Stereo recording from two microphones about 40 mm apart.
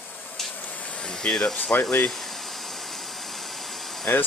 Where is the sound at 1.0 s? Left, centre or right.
Centre.